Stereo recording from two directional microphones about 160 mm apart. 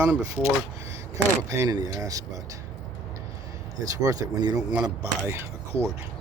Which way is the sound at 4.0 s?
25° right (ahead or behind).